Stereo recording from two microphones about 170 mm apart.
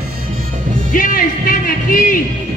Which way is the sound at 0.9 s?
55° left (ahead or behind).